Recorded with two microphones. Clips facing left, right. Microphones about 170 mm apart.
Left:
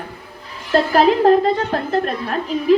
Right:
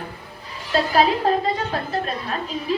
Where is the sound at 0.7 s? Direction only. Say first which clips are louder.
Left 5 dB; 50° left (ahead or behind).